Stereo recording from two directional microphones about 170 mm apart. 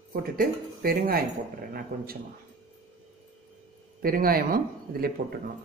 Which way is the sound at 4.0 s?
60° right (ahead or behind).